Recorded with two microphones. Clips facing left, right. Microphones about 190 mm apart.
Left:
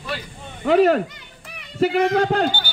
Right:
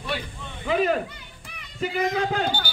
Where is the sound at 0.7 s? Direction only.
75° left (ahead or behind).